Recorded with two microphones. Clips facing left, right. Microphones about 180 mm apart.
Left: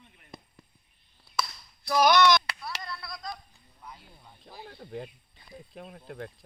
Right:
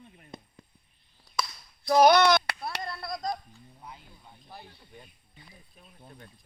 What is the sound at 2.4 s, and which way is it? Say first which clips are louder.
Chop: right 4 dB; 55° right (ahead or behind).